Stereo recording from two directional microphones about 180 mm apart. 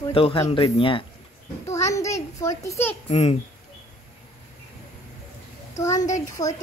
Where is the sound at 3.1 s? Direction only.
35° left (ahead or behind).